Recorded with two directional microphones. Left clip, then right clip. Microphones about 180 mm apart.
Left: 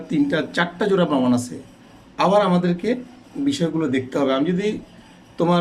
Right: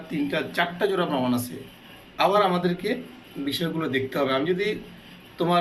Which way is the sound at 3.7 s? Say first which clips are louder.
Left 4 dB; 55° left (ahead or behind).